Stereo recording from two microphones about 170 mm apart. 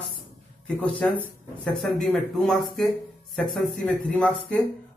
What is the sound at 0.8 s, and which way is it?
Speech, 5° left (ahead or behind).